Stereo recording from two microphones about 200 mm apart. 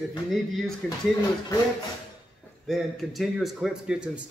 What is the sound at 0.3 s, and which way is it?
Speech, centre (ahead or behind).